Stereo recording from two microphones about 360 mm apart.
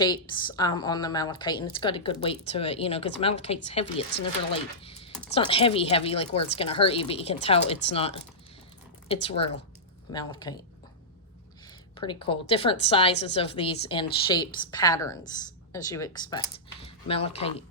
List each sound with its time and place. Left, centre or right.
0.0 s a woman's voice: centre
11.9 s a woman's voice: centre